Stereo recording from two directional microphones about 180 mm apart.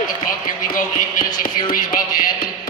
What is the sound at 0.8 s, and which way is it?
Music, 50° left (ahead or behind).